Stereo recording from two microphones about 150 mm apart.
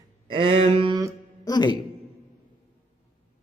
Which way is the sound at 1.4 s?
30° left (ahead or behind).